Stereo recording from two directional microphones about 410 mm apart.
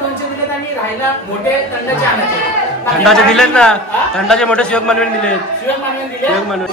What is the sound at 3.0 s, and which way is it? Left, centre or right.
A man's voice, centre.